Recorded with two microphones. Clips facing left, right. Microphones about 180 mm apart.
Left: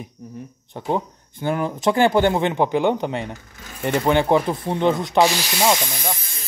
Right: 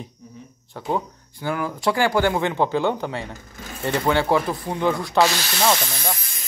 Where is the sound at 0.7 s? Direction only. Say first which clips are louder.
Left 2 dB; 20° left (ahead or behind).